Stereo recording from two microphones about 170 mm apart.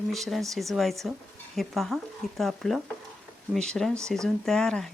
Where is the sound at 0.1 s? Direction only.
Centre (ahead or behind).